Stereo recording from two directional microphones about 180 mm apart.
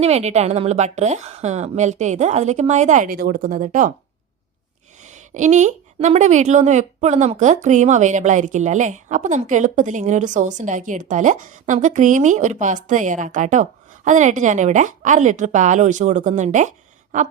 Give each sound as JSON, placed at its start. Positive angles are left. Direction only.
{"t": 0.0, "sound": "a woman's voice", "side_deg": -35}
{"t": 5.0, "sound": "speech", "side_deg": -40}